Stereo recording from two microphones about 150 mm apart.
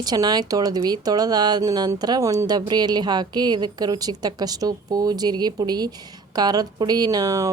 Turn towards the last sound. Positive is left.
turn(degrees=-20)  # may be behind; listen again after turning